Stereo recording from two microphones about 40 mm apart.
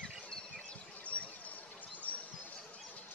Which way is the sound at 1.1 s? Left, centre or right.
Left.